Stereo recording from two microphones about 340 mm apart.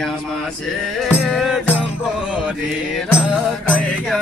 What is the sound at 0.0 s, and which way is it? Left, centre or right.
Music, centre.